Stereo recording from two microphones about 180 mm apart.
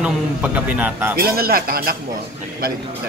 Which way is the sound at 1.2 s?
55° right (ahead or behind).